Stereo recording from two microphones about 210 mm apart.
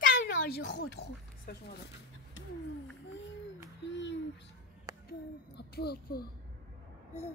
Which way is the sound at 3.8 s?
60° left (ahead or behind).